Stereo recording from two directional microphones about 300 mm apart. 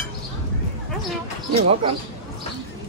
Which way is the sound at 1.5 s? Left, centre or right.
Centre.